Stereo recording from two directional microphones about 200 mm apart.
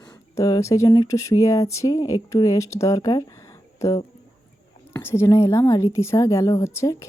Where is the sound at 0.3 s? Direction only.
15° left (ahead or behind).